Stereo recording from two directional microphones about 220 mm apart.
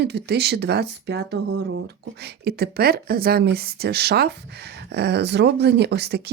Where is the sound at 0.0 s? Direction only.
50° right (ahead or behind).